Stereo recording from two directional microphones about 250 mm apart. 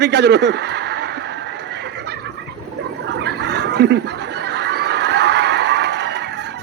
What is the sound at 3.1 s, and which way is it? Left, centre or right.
Fowl, right.